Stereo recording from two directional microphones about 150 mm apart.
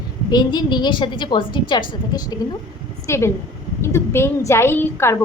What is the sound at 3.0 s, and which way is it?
A woman's voice, 20° left (ahead or behind).